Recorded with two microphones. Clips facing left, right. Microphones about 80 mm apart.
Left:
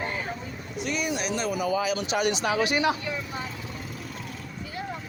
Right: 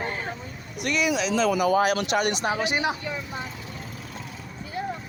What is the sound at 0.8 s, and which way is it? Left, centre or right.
Speech, right.